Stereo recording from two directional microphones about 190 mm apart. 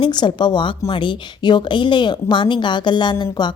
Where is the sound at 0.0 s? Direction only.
25° left (ahead or behind).